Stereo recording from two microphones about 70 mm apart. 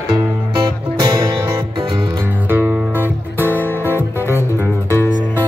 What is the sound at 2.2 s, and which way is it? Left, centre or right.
Music, right.